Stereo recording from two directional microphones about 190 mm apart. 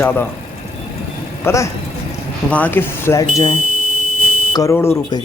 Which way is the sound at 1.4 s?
15° left (ahead or behind).